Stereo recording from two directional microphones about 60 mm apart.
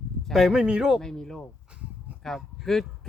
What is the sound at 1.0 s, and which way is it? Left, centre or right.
Speech, centre.